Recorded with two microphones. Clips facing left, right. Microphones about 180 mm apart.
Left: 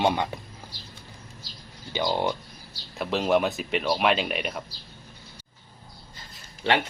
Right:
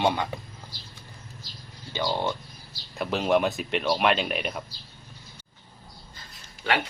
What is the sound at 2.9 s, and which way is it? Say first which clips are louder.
Speech: even; centre (ahead or behind).